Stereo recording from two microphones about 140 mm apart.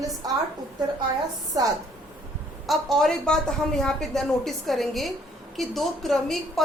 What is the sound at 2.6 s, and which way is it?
A woman's voice, centre (ahead or behind).